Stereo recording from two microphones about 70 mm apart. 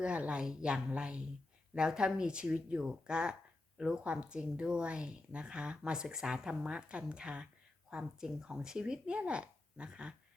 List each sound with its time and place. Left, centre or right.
0.0 s speech: centre